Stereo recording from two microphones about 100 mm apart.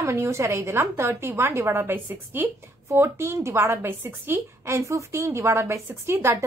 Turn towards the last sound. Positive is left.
turn(degrees=-25)  # may be behind; listen again after turning